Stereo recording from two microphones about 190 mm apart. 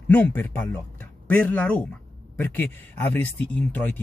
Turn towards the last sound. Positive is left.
turn(degrees=10)  # may be behind; listen again after turning